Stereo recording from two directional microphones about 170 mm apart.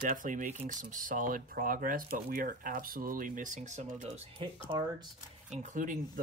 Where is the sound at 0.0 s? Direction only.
50° right (ahead or behind).